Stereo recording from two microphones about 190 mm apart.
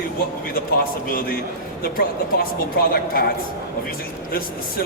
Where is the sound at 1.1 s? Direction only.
50° left (ahead or behind).